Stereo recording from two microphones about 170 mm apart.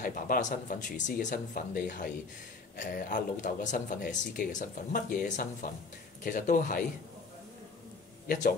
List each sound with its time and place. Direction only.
0.0 s speech: 50° left (ahead or behind)
8.3 s speech: 55° left (ahead or behind)